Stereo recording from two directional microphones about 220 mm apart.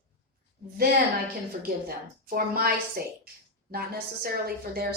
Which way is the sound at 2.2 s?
40° right (ahead or behind).